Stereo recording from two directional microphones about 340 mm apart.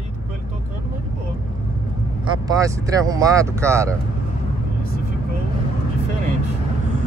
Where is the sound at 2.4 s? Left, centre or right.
Centre.